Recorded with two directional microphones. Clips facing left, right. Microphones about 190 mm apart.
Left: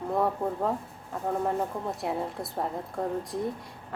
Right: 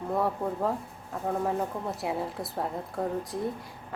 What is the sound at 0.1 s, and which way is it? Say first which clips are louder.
A woman's voice: left 1 dB; centre (ahead or behind).